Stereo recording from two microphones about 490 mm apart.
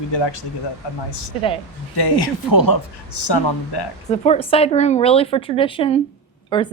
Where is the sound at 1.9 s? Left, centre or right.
Left.